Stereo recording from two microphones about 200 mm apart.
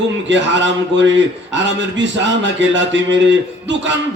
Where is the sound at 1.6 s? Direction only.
65° right (ahead or behind).